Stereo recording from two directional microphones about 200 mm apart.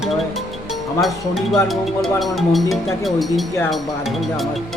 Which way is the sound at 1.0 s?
Centre (ahead or behind).